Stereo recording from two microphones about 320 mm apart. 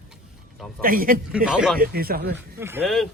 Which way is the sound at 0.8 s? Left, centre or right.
Right.